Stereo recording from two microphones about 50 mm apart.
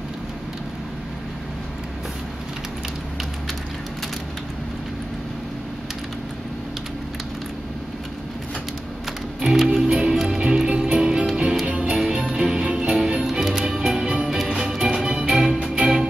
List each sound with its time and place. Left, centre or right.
9.4 s music: centre
13.3 s music: centre